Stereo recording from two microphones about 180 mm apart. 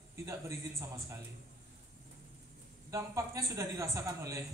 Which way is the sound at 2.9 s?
15° right (ahead or behind).